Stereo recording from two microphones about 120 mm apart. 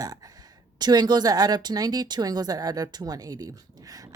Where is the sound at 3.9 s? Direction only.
30° right (ahead or behind).